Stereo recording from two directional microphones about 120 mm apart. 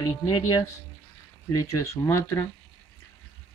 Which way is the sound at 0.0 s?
30° left (ahead or behind).